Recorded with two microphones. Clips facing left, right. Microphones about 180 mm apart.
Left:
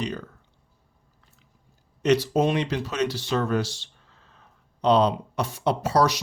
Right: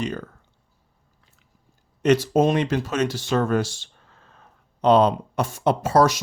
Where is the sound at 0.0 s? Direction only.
50° right (ahead or behind).